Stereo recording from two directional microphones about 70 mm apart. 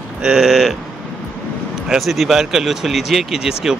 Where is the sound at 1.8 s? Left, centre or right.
Centre.